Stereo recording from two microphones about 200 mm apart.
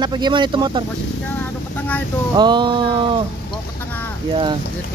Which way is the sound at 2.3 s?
20° right (ahead or behind).